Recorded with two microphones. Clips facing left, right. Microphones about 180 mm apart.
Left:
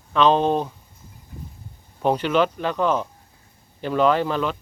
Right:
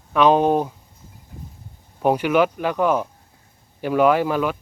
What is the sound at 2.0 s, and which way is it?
Speech, 10° right (ahead or behind).